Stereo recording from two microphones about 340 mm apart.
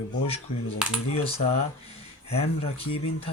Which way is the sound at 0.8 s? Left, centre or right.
Centre.